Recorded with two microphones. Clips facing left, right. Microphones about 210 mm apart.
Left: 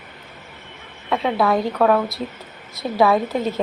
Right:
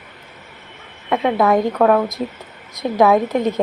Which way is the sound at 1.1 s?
5° right (ahead or behind).